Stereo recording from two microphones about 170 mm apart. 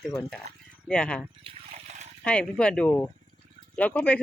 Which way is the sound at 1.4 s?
35° right (ahead or behind).